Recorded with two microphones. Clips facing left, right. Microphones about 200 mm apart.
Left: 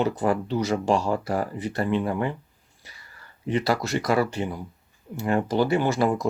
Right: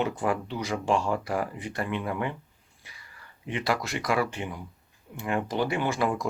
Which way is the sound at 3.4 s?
35° left (ahead or behind).